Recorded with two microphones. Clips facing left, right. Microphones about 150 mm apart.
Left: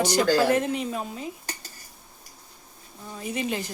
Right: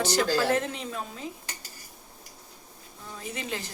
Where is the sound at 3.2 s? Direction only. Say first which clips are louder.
Left 6 dB; 15° left (ahead or behind).